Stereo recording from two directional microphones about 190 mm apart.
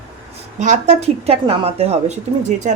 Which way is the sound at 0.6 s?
40° right (ahead or behind).